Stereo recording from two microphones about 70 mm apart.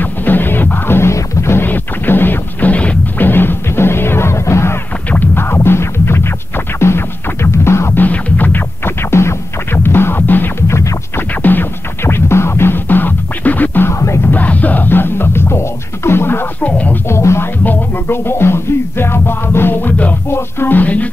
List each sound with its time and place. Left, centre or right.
0.0 s music: left
3.3 s music: left
5.1 s music: left
8.0 s music: left
10.7 s music: left
11.1 s music: left
13.9 s music: left
14.2 s music: left
16.6 s music: left
17.1 s music: left